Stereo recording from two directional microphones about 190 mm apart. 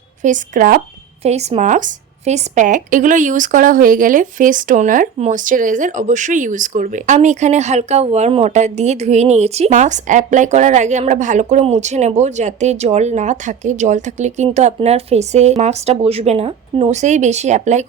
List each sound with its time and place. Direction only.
0.2 s speech: 40° right (ahead or behind)
1.2 s speech: 35° right (ahead or behind)